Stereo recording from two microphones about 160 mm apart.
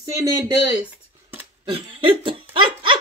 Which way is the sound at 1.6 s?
30° right (ahead or behind).